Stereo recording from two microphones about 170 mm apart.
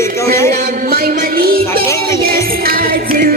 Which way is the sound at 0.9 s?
60° right (ahead or behind).